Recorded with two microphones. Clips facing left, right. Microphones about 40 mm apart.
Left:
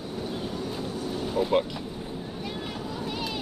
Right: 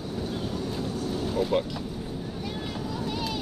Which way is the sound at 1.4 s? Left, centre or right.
Centre.